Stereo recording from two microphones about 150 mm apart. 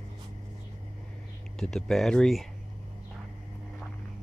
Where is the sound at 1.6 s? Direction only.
5° left (ahead or behind).